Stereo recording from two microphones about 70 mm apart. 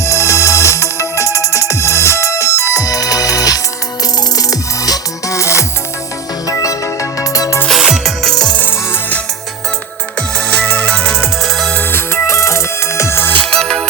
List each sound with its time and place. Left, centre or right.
0.0 s music: left
7.7 s music: centre
8.5 s music: left
10.2 s music: centre
11.7 s music: left
13.4 s music: centre